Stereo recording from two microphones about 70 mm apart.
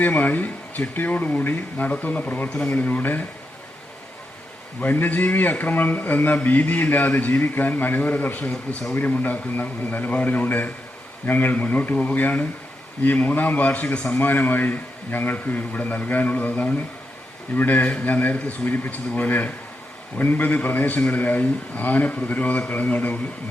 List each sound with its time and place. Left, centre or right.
0.0 s a man's voice: left
4.8 s a man's voice: left